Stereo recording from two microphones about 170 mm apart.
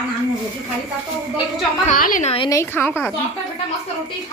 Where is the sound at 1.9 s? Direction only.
50° left (ahead or behind).